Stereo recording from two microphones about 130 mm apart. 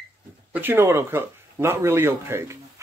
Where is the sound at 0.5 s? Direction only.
15° right (ahead or behind).